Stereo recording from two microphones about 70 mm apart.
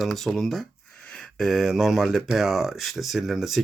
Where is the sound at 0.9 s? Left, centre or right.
Centre.